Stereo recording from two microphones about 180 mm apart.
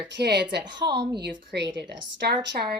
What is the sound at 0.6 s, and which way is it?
Speech, 25° right (ahead or behind).